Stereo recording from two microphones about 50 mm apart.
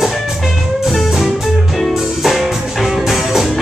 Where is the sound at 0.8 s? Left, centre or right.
Centre.